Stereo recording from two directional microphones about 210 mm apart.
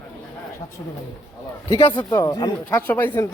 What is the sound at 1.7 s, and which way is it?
Speech, 25° left (ahead or behind).